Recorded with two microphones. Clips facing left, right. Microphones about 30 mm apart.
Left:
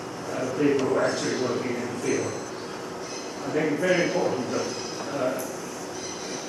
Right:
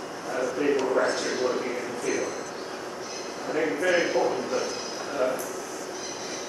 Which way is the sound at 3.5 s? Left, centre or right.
Centre.